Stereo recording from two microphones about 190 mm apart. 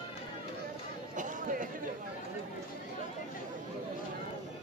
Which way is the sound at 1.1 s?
40° right (ahead or behind).